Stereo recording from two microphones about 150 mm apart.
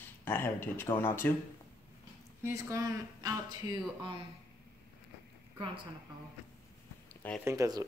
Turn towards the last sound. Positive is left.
turn(degrees=-25)  # may be behind; listen again after turning